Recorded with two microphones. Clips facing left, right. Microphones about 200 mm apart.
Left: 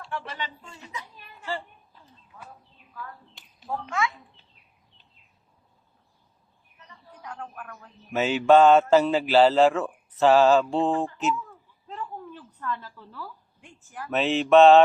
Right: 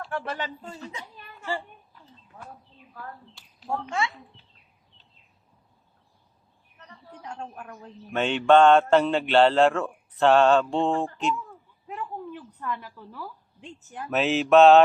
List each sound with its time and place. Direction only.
0.1 s speech: 50° right (ahead or behind)
3.8 s a man's voice: 30° right (ahead or behind)
6.7 s a sound: 65° right (ahead or behind)
7.2 s a man's voice: 30° right (ahead or behind)
8.1 s speech: 5° left (ahead or behind)
11.9 s a sound: 15° right (ahead or behind)
14.1 s speech: centre (ahead or behind)